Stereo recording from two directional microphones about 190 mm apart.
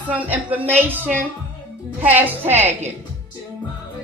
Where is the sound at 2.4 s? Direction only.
35° right (ahead or behind).